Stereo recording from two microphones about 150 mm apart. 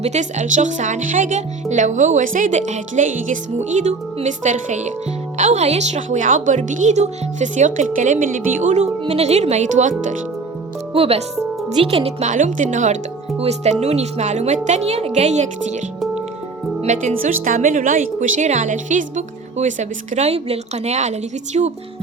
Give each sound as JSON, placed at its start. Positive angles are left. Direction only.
{"t": 0.0, "sound": "speech", "side_deg": -50}
{"t": 10.9, "sound": "speech", "side_deg": -40}
{"t": 16.8, "sound": "speech", "side_deg": -55}